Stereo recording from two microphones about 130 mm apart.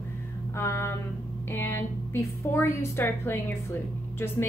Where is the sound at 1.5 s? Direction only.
15° left (ahead or behind).